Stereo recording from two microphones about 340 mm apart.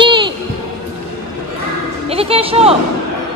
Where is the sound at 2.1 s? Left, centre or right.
Centre.